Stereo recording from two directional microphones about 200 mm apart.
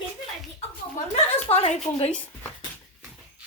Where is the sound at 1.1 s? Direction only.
30° left (ahead or behind).